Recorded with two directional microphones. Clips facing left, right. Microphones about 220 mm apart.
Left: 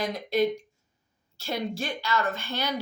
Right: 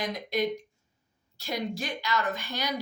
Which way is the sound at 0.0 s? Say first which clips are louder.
Left 4 dB; 15° right (ahead or behind).